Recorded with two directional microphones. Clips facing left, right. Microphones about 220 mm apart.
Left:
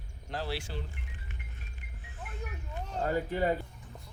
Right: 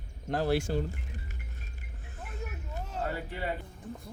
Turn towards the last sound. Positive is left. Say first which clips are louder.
# left 5 dB
turn(degrees=45)  # may be behind; listen again after turning